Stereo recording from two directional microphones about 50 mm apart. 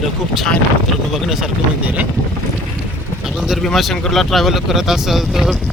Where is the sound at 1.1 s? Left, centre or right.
Centre.